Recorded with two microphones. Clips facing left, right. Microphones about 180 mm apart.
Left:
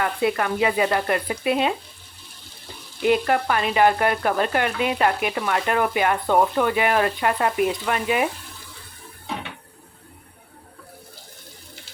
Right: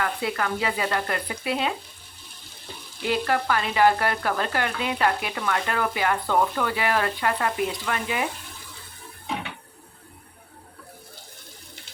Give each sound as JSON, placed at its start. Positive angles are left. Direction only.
{"t": 0.0, "sound": "frying", "side_deg": 20}
{"t": 3.1, "sound": "frying", "side_deg": 20}